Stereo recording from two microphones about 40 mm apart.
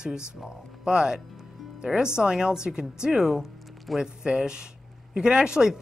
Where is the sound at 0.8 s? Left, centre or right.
Centre.